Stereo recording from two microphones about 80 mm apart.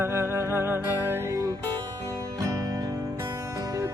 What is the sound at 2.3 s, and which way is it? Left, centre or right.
Music, right.